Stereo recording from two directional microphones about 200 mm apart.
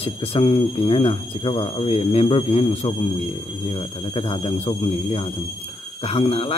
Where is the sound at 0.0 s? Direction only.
30° left (ahead or behind).